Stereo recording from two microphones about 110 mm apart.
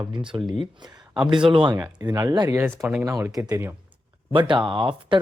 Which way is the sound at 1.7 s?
35° right (ahead or behind).